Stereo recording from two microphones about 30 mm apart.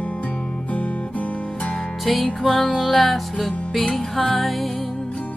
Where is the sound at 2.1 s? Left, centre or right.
Centre.